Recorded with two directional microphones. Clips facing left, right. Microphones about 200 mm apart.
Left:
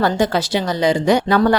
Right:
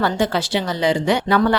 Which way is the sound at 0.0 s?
40° left (ahead or behind).